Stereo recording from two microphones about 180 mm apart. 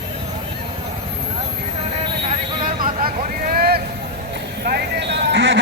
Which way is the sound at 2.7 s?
50° right (ahead or behind).